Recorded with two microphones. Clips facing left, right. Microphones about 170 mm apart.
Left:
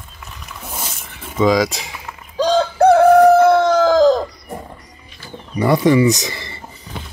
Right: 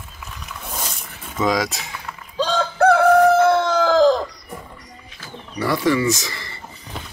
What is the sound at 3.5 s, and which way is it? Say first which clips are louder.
Chicken: left 4 dB; 15° left (ahead or behind).